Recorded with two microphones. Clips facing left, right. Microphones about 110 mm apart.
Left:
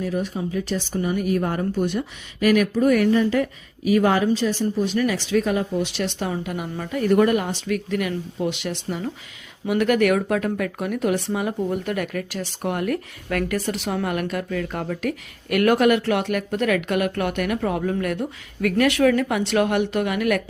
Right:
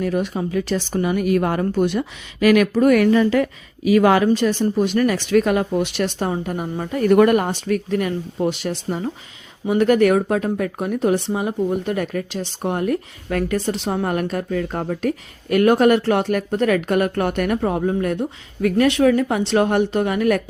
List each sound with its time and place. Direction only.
0.0 s speech: 75° right (ahead or behind); by 4.3 s 90° right
4.3 s speech: 60° right (ahead or behind); by 7.0 s 35° right (ahead or behind)
7.1 s speech: 75° right (ahead or behind)
7.3 s speech: 50° right (ahead or behind)
7.9 s speech: 35° right (ahead or behind)
17.6 s a woman's voice: 30° right (ahead or behind)